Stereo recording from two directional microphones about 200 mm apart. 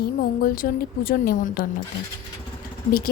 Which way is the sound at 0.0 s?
45° left (ahead or behind).